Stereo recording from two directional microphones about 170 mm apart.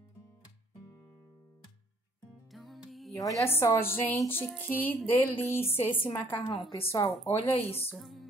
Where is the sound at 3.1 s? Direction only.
20° left (ahead or behind).